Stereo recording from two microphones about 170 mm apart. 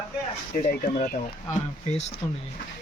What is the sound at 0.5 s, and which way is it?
Speech, 50° left (ahead or behind).